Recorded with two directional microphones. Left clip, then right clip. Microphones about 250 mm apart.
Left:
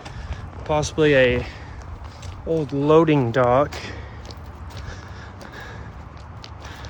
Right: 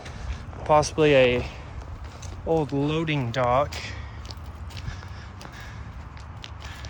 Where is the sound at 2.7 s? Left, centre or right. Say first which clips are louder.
Left 11 dB; centre.